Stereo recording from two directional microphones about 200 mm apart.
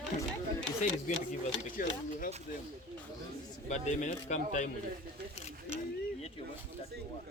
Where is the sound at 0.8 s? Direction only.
35° left (ahead or behind).